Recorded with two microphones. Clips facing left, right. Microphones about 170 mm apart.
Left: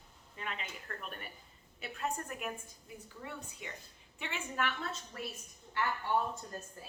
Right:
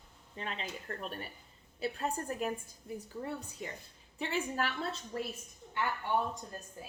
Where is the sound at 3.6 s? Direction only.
40° right (ahead or behind).